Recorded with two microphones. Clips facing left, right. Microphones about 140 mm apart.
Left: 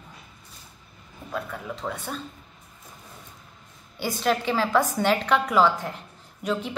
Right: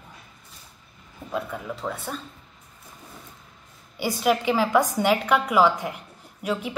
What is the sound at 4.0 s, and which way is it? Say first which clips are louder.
A woman's voice: right 2 dB; 10° right (ahead or behind).